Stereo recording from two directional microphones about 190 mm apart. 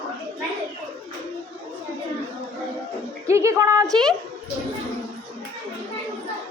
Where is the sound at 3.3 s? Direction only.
15° right (ahead or behind).